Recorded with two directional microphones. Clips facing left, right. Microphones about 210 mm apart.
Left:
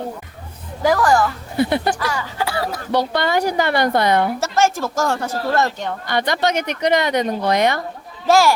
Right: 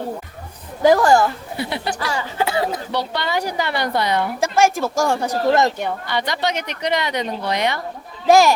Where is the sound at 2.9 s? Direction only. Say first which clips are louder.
Left 4 dB; 50° left (ahead or behind).